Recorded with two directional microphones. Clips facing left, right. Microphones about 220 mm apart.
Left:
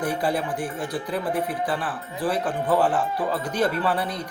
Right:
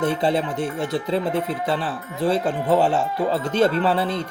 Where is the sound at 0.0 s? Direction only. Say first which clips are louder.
Right 4 dB; 25° right (ahead or behind).